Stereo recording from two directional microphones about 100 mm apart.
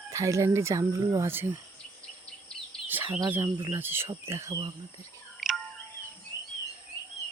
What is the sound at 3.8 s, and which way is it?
Speech, 25° right (ahead or behind).